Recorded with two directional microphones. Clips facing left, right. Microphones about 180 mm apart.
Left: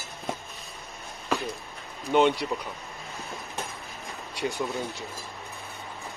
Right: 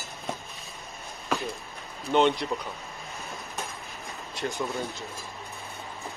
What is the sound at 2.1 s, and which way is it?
Speech, 10° left (ahead or behind).